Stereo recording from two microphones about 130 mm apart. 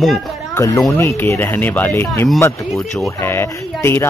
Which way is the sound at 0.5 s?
25° left (ahead or behind).